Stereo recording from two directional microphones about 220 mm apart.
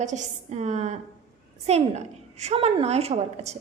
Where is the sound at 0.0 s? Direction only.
30° right (ahead or behind).